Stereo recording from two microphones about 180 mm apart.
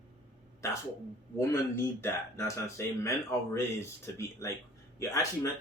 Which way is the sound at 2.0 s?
15° left (ahead or behind).